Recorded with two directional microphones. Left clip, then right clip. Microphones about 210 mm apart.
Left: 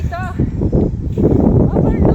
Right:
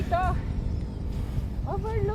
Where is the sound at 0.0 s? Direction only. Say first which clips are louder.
Left 1 dB; centre (ahead or behind).